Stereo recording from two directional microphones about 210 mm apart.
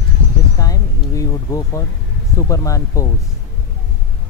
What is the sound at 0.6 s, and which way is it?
Speech, 15° left (ahead or behind).